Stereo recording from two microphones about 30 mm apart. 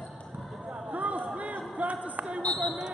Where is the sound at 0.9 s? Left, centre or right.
Right.